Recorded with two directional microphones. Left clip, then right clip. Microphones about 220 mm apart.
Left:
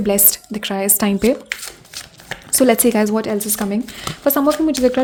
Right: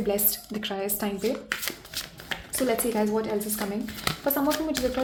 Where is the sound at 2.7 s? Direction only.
45° left (ahead or behind).